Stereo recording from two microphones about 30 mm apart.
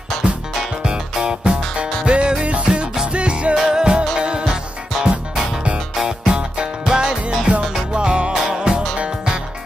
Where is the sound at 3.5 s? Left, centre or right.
Right.